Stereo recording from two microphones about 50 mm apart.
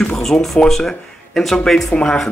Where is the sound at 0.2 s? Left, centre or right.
Centre.